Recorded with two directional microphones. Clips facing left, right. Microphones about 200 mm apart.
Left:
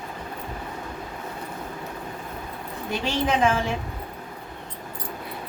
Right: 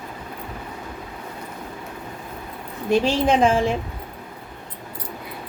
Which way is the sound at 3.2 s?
30° right (ahead or behind).